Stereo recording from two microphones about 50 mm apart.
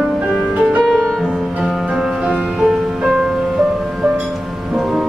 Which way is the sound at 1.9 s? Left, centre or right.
Centre.